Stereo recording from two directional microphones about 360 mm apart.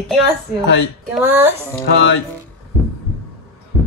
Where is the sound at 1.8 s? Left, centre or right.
Left.